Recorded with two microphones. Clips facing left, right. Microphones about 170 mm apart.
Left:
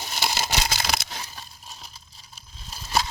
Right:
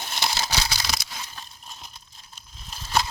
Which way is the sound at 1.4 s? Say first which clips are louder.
Even; 5° left (ahead or behind).